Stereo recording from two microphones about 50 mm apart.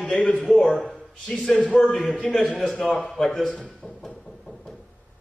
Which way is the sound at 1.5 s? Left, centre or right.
Left.